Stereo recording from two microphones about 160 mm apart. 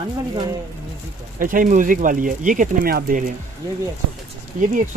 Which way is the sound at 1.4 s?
55° right (ahead or behind).